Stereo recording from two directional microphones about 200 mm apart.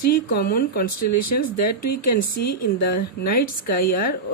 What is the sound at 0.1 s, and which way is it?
A woman's voice, 50° left (ahead or behind).